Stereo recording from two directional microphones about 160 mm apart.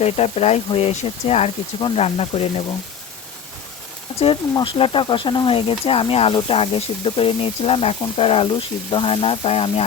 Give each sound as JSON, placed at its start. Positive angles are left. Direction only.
{"t": 0.0, "sound": "speech", "side_deg": 40}
{"t": 4.5, "sound": "speech", "side_deg": 30}